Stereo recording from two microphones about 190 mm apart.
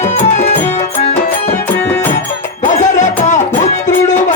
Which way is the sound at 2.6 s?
40° left (ahead or behind).